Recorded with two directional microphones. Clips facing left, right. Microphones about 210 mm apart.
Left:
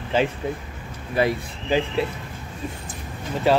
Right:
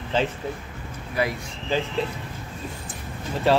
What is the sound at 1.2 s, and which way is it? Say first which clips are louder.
Speech: left 4 dB; 25° left (ahead or behind).